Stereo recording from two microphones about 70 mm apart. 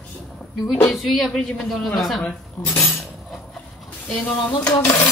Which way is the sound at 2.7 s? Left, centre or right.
Centre.